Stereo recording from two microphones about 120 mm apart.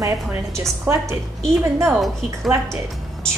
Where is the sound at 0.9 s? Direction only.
20° right (ahead or behind).